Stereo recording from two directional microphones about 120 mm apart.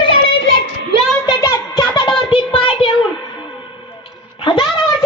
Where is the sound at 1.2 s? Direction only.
30° left (ahead or behind).